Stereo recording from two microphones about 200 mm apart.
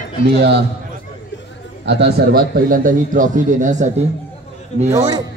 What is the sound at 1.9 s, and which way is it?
A man's voice, 55° right (ahead or behind).